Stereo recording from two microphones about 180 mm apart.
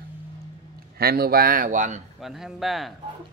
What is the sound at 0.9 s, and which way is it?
Speech, 60° right (ahead or behind).